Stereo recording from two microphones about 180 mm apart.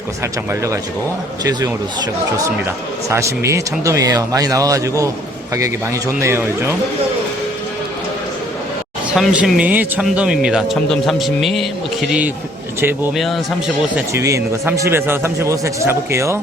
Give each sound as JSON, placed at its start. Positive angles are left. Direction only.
{"t": 1.5, "sound": "a man's voice", "side_deg": -20}
{"t": 9.1, "sound": "speech", "side_deg": -5}
{"t": 13.1, "sound": "speech", "side_deg": 0}
{"t": 13.9, "sound": "a man's voice", "side_deg": -15}